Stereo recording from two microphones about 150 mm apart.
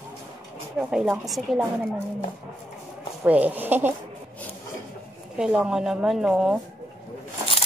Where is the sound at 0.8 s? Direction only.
5° right (ahead or behind).